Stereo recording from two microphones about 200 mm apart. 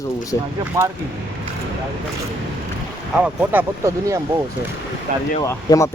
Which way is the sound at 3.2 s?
10° right (ahead or behind).